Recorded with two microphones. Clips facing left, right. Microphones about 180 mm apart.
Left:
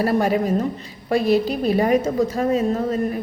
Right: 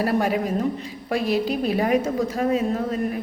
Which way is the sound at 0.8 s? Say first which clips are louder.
Left 4 dB; 35° left (ahead or behind).